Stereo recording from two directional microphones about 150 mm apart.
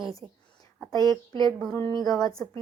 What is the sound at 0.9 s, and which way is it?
Speech, 25° left (ahead or behind).